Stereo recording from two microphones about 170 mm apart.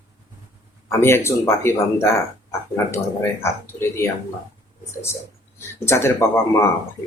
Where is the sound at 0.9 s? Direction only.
15° left (ahead or behind).